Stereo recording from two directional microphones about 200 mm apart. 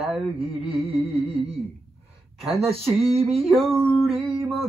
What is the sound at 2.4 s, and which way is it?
Speech, 30° right (ahead or behind).